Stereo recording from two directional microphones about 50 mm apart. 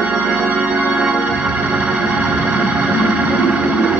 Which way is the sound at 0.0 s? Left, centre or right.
Centre.